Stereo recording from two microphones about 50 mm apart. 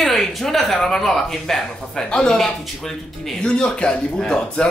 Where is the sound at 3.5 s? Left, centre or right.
Centre.